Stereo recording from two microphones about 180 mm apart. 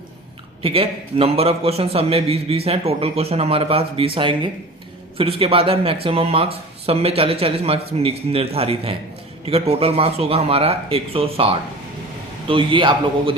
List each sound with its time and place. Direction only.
0.6 s a man's voice: 30° right (ahead or behind)